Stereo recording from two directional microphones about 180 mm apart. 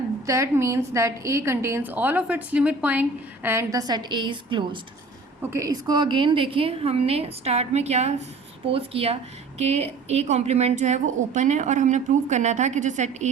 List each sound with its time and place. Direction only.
0.3 s a woman's voice: 15° right (ahead or behind); by 13.3 s 40° right (ahead or behind)